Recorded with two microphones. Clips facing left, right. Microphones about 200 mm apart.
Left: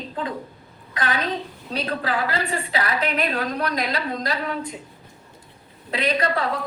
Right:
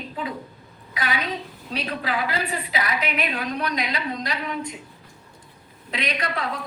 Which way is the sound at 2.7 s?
10° right (ahead or behind).